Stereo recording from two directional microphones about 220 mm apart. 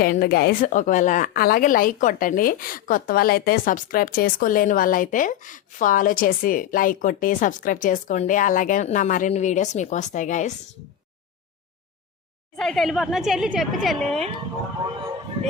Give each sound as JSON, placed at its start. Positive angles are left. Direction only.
{"t": 0.0, "sound": "a woman's voice", "side_deg": 45}
{"t": 12.5, "sound": "speech", "side_deg": 0}